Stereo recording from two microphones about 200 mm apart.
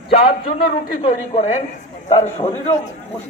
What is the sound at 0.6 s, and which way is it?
Speech, 40° left (ahead or behind).